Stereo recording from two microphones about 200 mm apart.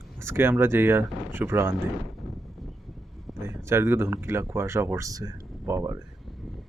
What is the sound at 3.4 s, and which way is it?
Speech, 15° right (ahead or behind).